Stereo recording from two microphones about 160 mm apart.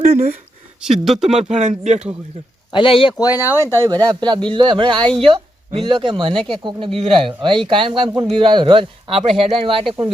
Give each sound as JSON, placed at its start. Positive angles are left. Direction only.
{"t": 0.1, "sound": "speech", "side_deg": -60}
{"t": 0.8, "sound": "speech", "side_deg": 0}
{"t": 1.3, "sound": "speech", "side_deg": -45}
{"t": 2.7, "sound": "speech", "side_deg": 35}
{"t": 3.3, "sound": "speech", "side_deg": -15}
{"t": 3.7, "sound": "a man's voice", "side_deg": -25}